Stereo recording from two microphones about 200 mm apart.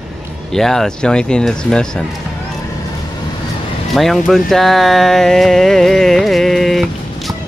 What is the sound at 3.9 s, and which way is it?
Speech, centre (ahead or behind).